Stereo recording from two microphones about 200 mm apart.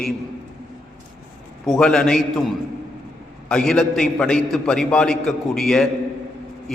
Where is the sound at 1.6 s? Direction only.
5° left (ahead or behind).